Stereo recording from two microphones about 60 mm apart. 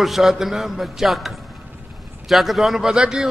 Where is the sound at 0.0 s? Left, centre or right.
Centre.